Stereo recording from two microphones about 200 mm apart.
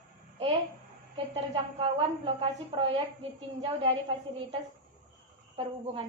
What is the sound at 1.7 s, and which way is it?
A woman's voice, 30° right (ahead or behind).